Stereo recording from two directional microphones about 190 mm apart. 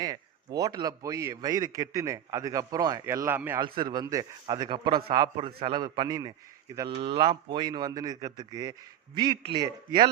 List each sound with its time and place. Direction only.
0.0 s a man's voice: 20° right (ahead or behind)
3.6 s a man's voice: 25° right (ahead or behind)